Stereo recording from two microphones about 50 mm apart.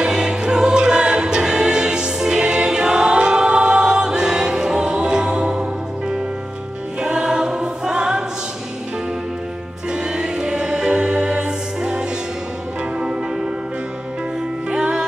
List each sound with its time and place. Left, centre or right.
0.0 s music: centre
7.0 s choir: centre
9.8 s music: centre
14.7 s music: centre